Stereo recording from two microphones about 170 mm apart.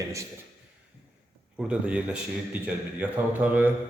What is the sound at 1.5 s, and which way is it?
A man's voice, 5° right (ahead or behind).